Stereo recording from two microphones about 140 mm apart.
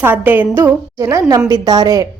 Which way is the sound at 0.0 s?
15° right (ahead or behind).